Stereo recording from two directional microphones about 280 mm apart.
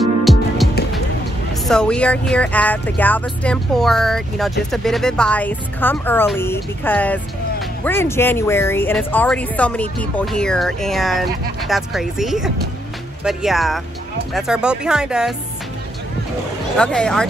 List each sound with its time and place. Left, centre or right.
0.2 s music: centre
1.7 s speech: centre
16.7 s speech: centre